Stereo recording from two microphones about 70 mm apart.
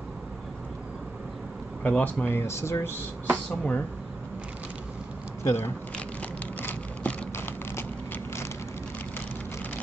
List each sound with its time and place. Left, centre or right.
1.8 s speech: left
2.2 s speech: left
3.4 s speech: centre
5.4 s speech: left
6.6 s vehicle: left